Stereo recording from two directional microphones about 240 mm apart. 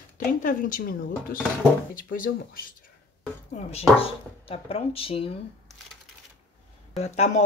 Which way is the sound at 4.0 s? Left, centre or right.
Left.